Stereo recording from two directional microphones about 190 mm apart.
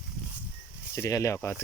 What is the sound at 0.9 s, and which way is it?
Speech, 15° left (ahead or behind).